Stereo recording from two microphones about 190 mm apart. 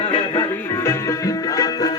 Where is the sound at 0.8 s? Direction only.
15° left (ahead or behind).